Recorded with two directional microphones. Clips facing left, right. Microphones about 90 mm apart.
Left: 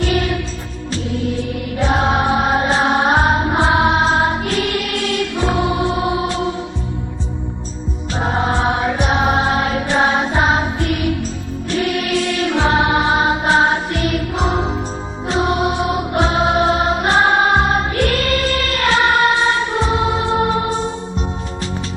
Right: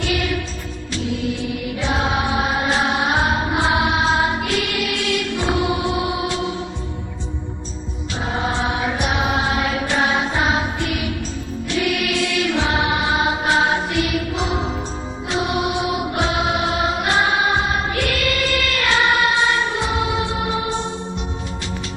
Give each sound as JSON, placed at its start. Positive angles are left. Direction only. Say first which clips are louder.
{"t": 1.8, "sound": "music", "louder": "left 5 dB", "side_deg": 40}
{"t": 8.1, "sound": "music", "louder": "left 5 dB", "side_deg": 40}